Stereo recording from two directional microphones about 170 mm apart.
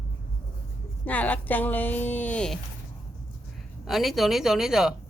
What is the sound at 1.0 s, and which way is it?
Speech, 10° left (ahead or behind).